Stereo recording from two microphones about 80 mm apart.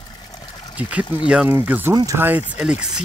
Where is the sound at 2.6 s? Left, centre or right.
Centre.